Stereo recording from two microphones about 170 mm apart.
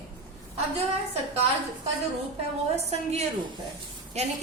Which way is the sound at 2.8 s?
40° right (ahead or behind).